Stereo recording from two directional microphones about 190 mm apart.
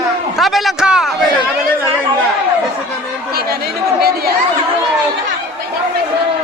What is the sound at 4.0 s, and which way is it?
Speech, 55° right (ahead or behind).